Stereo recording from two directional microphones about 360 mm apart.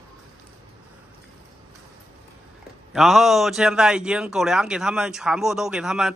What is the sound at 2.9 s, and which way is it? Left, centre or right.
A man's voice, centre.